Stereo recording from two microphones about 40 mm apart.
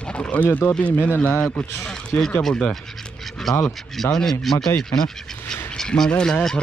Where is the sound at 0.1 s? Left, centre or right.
Left.